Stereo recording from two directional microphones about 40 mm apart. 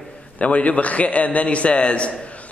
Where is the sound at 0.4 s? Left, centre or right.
Left.